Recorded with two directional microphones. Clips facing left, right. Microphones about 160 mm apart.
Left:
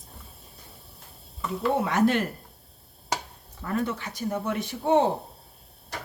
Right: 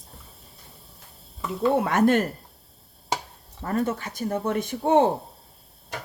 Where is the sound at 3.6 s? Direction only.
45° right (ahead or behind).